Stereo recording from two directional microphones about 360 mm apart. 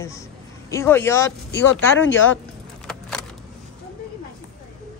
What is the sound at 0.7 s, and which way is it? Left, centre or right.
Speech, centre.